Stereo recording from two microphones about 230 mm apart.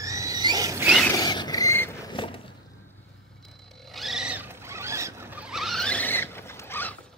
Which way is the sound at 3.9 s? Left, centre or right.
Centre.